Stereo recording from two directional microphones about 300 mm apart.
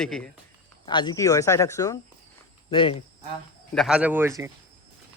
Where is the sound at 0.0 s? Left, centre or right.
Centre.